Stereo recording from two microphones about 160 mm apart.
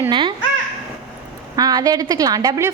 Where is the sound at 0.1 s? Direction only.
30° right (ahead or behind).